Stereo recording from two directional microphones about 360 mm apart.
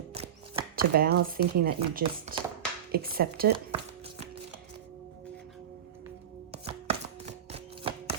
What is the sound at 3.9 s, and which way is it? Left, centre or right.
Music, centre.